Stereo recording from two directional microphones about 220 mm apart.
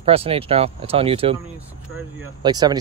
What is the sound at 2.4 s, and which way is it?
Speech, 20° right (ahead or behind).